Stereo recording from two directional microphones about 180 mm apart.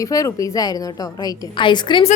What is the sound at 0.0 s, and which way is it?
A woman's voice, 20° left (ahead or behind).